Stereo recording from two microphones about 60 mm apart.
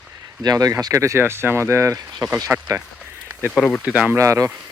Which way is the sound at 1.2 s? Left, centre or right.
Right.